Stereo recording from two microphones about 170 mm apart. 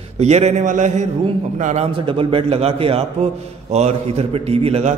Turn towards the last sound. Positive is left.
turn(degrees=-40)  # may be behind; listen again after turning